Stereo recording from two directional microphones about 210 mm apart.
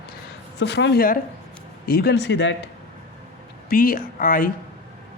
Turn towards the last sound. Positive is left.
turn(degrees=40)  # may be behind; listen again after turning